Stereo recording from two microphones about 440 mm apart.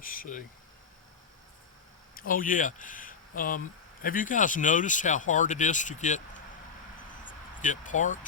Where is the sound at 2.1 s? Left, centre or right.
Centre.